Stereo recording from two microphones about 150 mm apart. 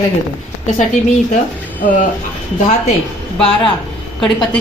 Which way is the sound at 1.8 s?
60° left (ahead or behind).